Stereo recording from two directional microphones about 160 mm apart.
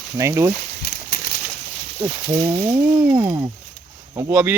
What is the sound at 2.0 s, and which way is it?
Speech, 20° right (ahead or behind).